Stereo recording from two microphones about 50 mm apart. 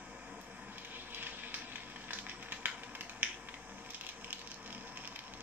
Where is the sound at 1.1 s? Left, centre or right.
Right.